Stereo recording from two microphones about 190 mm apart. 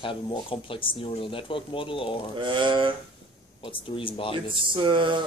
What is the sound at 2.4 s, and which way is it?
Speech, 25° right (ahead or behind).